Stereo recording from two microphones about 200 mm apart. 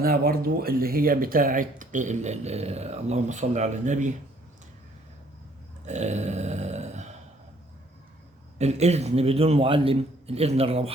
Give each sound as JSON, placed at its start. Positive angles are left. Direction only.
{"t": 0.0, "sound": "speech", "side_deg": -50}
{"t": 5.8, "sound": "a sound", "side_deg": -35}
{"t": 8.5, "sound": "speech", "side_deg": -35}